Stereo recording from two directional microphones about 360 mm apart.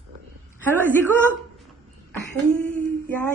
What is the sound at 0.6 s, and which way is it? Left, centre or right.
Speech, centre.